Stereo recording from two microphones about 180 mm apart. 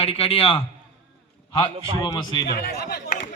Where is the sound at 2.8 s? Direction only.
60° left (ahead or behind).